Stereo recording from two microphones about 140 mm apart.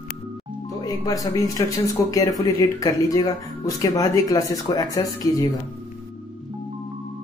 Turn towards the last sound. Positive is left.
turn(degrees=25)  # may be behind; listen again after turning